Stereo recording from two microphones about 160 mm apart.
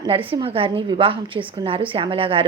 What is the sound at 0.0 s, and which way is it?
Speech, 35° right (ahead or behind).